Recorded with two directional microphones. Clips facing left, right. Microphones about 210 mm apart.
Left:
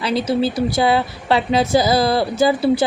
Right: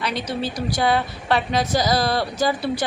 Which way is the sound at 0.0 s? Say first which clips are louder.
Left 7 dB; 30° left (ahead or behind).